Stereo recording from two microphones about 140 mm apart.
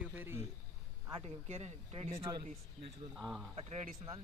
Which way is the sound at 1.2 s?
50° right (ahead or behind).